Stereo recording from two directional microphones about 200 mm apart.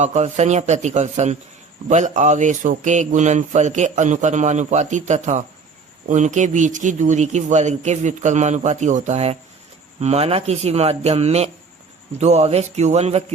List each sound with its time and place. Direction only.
0.0 s speech: 35° right (ahead or behind)